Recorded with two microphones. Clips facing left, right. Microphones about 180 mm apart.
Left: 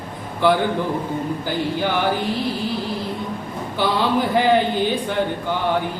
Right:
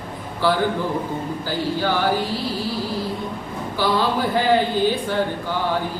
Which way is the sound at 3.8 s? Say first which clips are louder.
Left 1 dB; 20° left (ahead or behind).